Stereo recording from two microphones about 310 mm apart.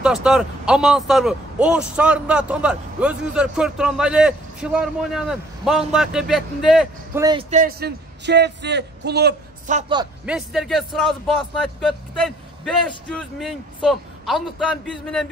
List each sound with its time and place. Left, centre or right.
0.0 s a man's voice: centre
7.2 s a man's voice: centre
10.2 s a man's voice: centre